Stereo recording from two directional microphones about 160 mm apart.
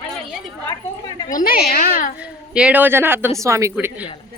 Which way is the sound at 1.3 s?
60° left (ahead or behind).